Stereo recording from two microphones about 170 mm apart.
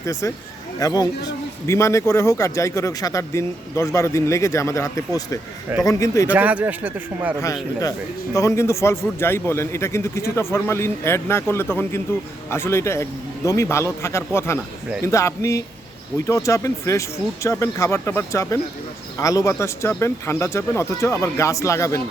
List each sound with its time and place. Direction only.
0.0 s a man's voice: 15° left (ahead or behind)
6.3 s a man's voice: 10° right (ahead or behind)
7.4 s a man's voice: 20° left (ahead or behind)